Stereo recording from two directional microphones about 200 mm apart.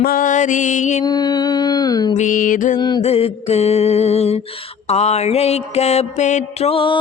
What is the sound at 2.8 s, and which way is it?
Mantra, 20° left (ahead or behind).